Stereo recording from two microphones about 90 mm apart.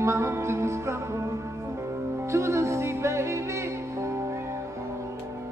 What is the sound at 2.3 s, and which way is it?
Music, 35° right (ahead or behind).